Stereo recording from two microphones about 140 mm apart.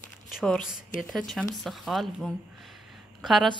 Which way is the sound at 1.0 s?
Centre (ahead or behind).